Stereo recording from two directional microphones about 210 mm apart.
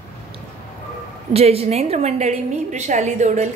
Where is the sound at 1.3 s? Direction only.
30° right (ahead or behind).